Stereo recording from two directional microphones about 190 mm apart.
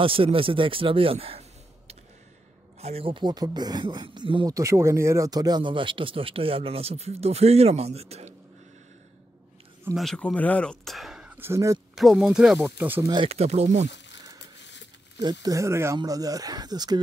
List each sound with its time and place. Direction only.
0.0 s speech: 30° right (ahead or behind)
2.8 s speech: 30° right (ahead or behind)
9.9 s speech: 5° left (ahead or behind); by 11.8 s 15° right (ahead or behind)
11.9 s speech: centre (ahead or behind)
13.0 s speech: 25° right (ahead or behind)
14.7 s a sound: 70° left (ahead or behind)
15.4 s speech: 15° right (ahead or behind)